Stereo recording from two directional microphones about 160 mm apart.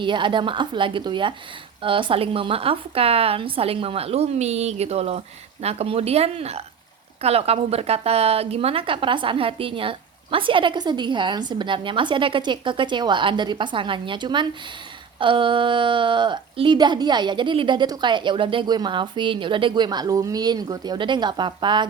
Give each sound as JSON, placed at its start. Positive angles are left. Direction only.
{"t": 0.0, "sound": "a woman's voice", "side_deg": -30}